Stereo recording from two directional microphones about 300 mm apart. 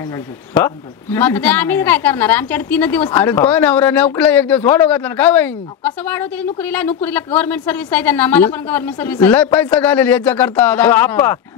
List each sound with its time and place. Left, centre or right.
0.6 s a woman's voice: centre